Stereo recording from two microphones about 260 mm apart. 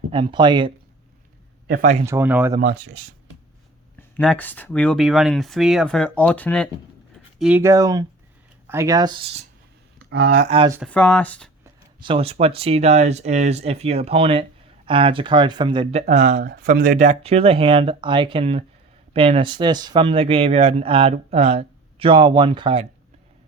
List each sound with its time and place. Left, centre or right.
0.1 s speech: centre
1.6 s speech: right
2.0 s speech: centre
2.6 s speech: right
4.2 s speech: centre; by 9.5 s right
10.0 s speech: right
10.5 s speech: centre
10.8 s speech: centre
11.6 s speech: centre